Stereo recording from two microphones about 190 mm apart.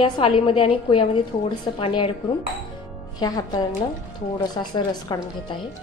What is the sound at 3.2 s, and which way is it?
A woman's voice, 20° left (ahead or behind).